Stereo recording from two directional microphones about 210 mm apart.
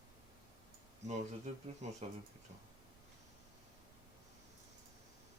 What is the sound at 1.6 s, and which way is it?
Speech, 30° right (ahead or behind).